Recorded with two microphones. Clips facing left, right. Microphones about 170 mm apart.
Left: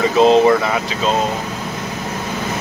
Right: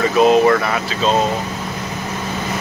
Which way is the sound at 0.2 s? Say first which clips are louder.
Left 1 dB; 20° left (ahead or behind).